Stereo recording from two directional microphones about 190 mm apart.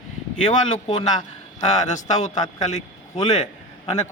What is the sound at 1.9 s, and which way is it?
Speech, 40° left (ahead or behind).